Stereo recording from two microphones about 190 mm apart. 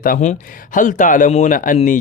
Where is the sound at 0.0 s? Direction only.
45° left (ahead or behind).